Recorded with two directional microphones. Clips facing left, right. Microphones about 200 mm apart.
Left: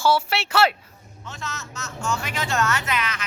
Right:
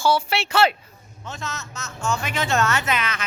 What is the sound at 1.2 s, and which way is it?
Speech, 20° right (ahead or behind).